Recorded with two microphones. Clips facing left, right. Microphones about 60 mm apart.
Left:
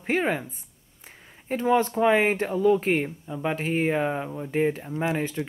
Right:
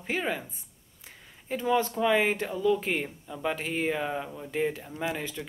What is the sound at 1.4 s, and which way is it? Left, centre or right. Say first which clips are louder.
Speech: left 4 dB; left.